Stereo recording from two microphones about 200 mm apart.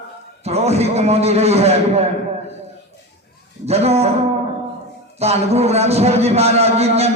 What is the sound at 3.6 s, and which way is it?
Speech, 30° right (ahead or behind).